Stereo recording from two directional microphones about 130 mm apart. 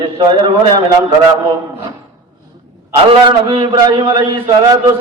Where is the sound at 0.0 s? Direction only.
35° right (ahead or behind).